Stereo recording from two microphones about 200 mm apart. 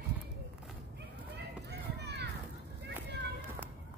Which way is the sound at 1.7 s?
55° right (ahead or behind).